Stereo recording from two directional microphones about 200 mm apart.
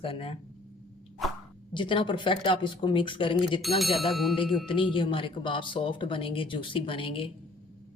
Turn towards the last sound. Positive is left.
turn(degrees=25)  # may be behind; listen again after turning